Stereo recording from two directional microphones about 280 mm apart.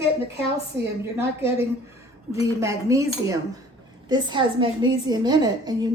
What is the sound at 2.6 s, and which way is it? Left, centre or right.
A woman's voice, centre.